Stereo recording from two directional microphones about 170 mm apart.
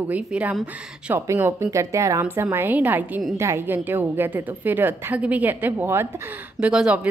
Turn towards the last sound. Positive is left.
turn(degrees=-5)  # may be behind; listen again after turning